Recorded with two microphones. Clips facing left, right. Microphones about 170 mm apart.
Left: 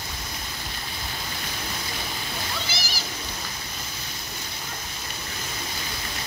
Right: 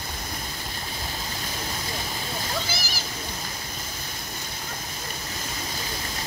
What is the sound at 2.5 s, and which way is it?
Splash, 45° right (ahead or behind).